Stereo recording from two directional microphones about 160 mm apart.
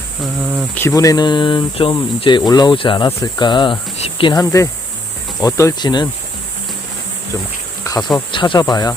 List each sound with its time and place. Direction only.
0.8 s speech: 20° left (ahead or behind)
7.9 s speech: 20° left (ahead or behind)